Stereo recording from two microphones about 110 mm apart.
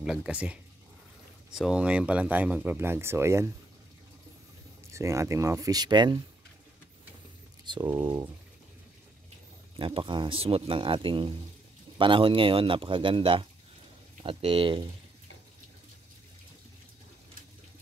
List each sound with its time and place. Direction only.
0.0 s speech: 5° right (ahead or behind); by 3.5 s 25° right (ahead or behind)
4.9 s speech: 25° right (ahead or behind); by 6.2 s 40° right (ahead or behind)
7.6 s speech: 45° right (ahead or behind)
9.8 s speech: 50° right (ahead or behind)